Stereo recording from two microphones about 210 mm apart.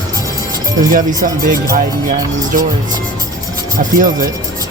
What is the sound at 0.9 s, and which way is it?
Speech, 40° right (ahead or behind).